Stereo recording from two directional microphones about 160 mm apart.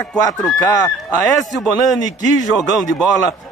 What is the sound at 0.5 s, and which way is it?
Speech, 20° left (ahead or behind).